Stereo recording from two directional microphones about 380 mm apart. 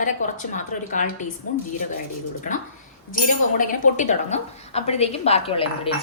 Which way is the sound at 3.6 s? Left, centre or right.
Left.